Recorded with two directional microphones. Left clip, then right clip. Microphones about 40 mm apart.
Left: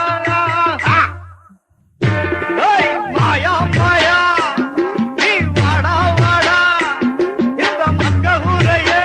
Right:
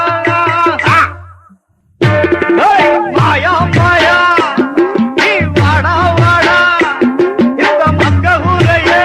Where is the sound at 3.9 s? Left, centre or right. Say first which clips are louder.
Right 3 dB; centre.